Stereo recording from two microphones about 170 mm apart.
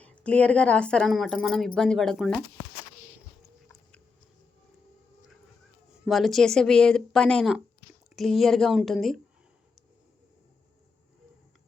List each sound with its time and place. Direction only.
0.0 s speech: 5° left (ahead or behind)
6.1 s speech: centre (ahead or behind)